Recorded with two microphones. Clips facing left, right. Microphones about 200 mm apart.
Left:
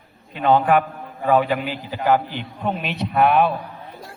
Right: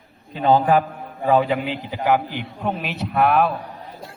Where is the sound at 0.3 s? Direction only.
35° right (ahead or behind); by 3.5 s centre (ahead or behind).